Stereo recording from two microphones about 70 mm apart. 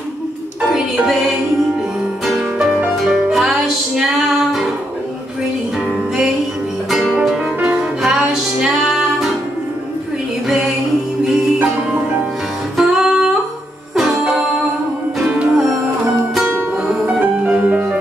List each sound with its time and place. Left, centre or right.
0.6 s music: centre
6.9 s music: centre
11.2 s music: centre
15.2 s music: centre
16.7 s music: centre